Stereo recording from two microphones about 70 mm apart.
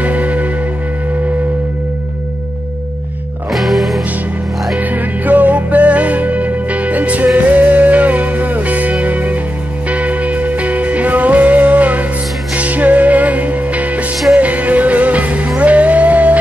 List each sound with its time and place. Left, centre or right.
0.0 s music: right
3.5 s music: centre
4.7 s music: right